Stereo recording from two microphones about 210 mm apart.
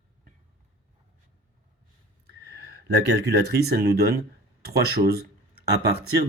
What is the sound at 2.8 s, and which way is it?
Speech, 50° right (ahead or behind).